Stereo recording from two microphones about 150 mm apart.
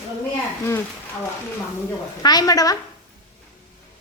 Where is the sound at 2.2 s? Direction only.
25° left (ahead or behind).